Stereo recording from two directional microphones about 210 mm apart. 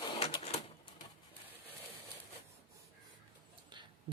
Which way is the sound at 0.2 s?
30° left (ahead or behind).